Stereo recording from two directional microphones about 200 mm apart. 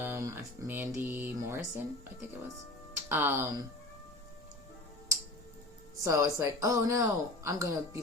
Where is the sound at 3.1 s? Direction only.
10° right (ahead or behind).